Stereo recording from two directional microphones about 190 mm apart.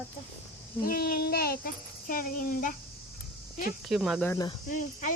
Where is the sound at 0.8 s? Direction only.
50° left (ahead or behind).